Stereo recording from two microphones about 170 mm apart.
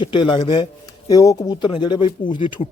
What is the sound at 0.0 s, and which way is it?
Speech, 30° left (ahead or behind).